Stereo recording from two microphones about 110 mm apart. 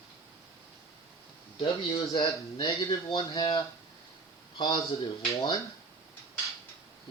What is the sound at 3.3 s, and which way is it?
A man's voice, 55° left (ahead or behind).